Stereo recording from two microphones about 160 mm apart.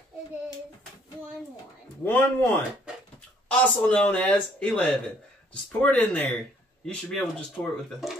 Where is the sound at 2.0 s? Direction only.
10° left (ahead or behind).